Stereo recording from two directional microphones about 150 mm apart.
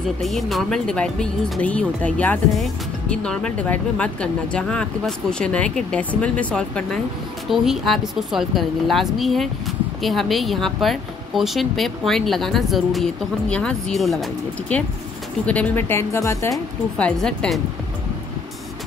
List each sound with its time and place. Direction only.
0.2 s speech: centre (ahead or behind); by 16.6 s 20° left (ahead or behind)
17.0 s speech: 5° left (ahead or behind)